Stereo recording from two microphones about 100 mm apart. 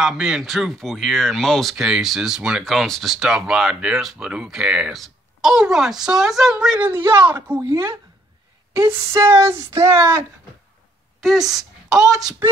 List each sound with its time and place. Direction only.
0.0 s speech: 5° right (ahead or behind)
6.9 s speech: 25° right (ahead or behind)
7.6 s speech: 35° right (ahead or behind)
11.2 s speech: centre (ahead or behind)